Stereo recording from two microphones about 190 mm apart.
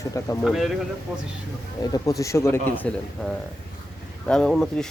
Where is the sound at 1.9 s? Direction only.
20° left (ahead or behind).